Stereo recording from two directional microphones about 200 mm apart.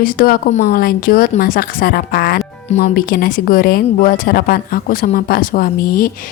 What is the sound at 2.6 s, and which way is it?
Speech, 35° left (ahead or behind).